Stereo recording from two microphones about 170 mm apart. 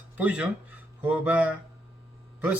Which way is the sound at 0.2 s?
10° right (ahead or behind).